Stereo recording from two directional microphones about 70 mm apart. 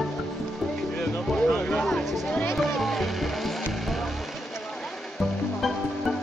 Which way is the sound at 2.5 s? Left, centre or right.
Centre.